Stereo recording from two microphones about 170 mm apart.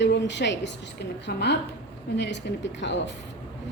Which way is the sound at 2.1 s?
90° left.